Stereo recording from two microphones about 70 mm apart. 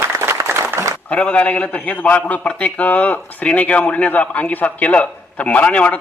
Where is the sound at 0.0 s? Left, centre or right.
Right.